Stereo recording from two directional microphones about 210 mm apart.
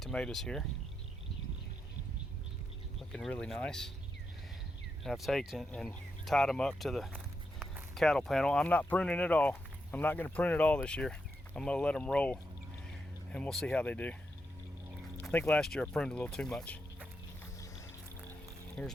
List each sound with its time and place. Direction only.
0.0 s speech: 5° left (ahead or behind)
3.1 s speech: 5° left (ahead or behind)
5.0 s speech: centre (ahead or behind)
15.2 s speech: 10° left (ahead or behind)
17.4 s music: 15° left (ahead or behind)
18.8 s speech: 5° left (ahead or behind)